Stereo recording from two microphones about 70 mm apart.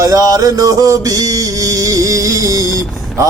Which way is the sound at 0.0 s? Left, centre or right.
Right.